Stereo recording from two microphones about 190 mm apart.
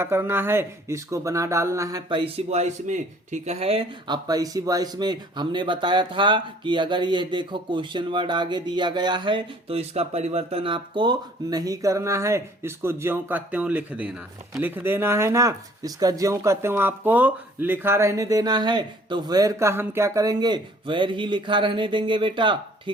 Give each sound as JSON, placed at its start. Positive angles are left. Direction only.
{"t": 0.0, "sound": "speech", "side_deg": -10}